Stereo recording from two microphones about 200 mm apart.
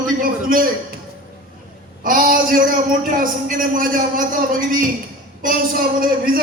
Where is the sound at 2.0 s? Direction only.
45° right (ahead or behind).